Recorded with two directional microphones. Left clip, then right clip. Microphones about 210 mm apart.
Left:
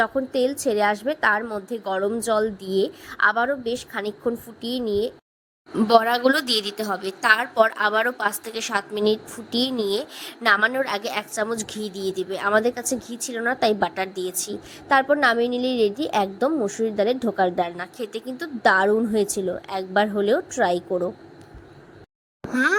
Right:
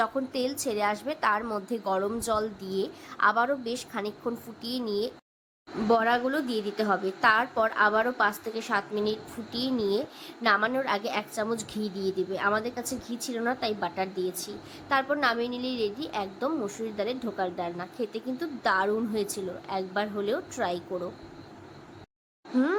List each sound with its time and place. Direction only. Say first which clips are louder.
0.0 s a woman's voice: left 7 dB; 20° left (ahead or behind)
5.9 s speech: left 7 dB; 45° left (ahead or behind)
6.7 s a woman's voice: even; centre (ahead or behind)
7.0 s a woman's voice: left 6 dB; 40° left (ahead or behind); by 21.1 s 25° left (ahead or behind)